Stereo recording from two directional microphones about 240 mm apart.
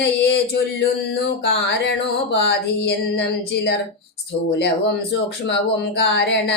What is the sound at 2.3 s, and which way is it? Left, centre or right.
Speech, left.